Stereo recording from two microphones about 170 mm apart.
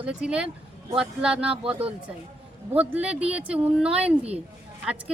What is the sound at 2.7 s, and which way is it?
Speech, 10° right (ahead or behind).